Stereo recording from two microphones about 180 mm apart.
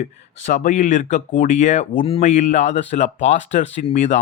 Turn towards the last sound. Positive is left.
turn(degrees=40)  # may be behind; listen again after turning